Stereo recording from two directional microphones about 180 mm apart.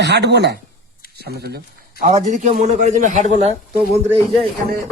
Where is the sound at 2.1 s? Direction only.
40° right (ahead or behind).